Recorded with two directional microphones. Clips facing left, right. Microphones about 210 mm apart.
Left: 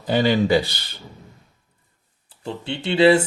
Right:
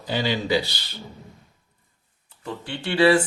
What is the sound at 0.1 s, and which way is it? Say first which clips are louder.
Speech: left 6 dB; 50° left (ahead or behind).